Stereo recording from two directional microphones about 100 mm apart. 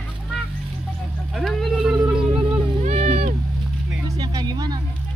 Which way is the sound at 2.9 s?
90° right.